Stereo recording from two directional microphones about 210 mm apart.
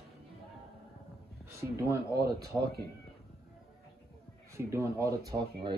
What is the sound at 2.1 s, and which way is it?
Speech, 50° right (ahead or behind).